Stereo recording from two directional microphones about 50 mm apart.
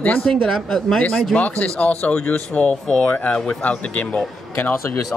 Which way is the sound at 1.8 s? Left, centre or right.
Left.